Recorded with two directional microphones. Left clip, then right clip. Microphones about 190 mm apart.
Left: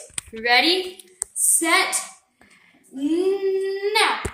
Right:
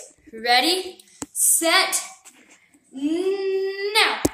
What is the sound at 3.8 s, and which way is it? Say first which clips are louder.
Speech: right 1 dB; 10° right (ahead or behind).